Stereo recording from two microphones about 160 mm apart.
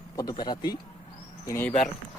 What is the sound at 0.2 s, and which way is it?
Speech, 25° left (ahead or behind).